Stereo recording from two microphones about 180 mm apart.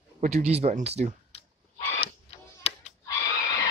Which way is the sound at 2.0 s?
35° left (ahead or behind).